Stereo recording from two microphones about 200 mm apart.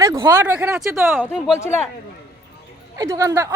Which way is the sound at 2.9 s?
15° right (ahead or behind).